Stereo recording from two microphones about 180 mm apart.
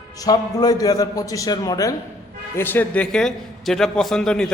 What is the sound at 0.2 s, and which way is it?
A man's voice, 20° left (ahead or behind).